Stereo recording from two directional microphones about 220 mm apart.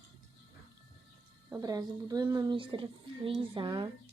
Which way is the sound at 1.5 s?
15° right (ahead or behind).